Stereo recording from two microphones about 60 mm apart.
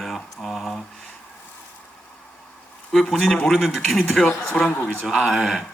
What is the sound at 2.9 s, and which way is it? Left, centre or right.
A man's voice, centre.